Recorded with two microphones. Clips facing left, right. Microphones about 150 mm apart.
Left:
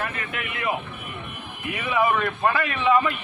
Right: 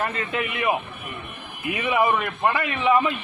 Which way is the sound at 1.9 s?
15° right (ahead or behind).